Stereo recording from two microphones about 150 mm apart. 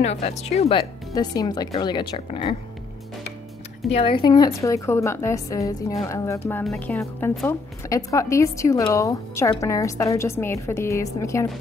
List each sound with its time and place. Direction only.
0.0 s speech: 45° left (ahead or behind)
1.1 s a woman's voice: 25° left (ahead or behind)
3.9 s a woman's voice: 35° left (ahead or behind); by 11.4 s 20° left (ahead or behind)